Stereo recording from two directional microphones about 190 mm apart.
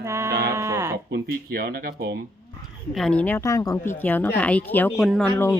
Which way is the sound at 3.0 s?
5° left (ahead or behind).